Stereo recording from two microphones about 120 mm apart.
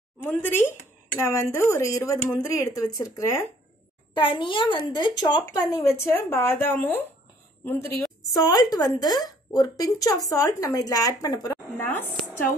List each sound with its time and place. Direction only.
0.2 s speech: 15° left (ahead or behind)
4.1 s a woman's voice: 45° left (ahead or behind); by 7.9 s 15° left (ahead or behind)
8.4 s a woman's voice: 35° left (ahead or behind)